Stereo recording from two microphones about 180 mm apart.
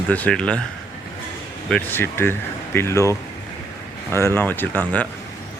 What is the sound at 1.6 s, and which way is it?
Speech, 10° left (ahead or behind).